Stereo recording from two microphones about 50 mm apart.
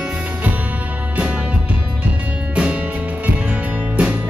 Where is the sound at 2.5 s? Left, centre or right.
Right.